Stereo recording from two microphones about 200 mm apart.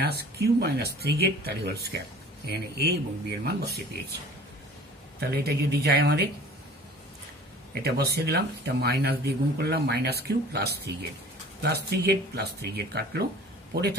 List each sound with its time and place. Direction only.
0.0 s speech: 55° right (ahead or behind)
5.2 s speech: 50° right (ahead or behind)
7.8 s speech: 55° right (ahead or behind)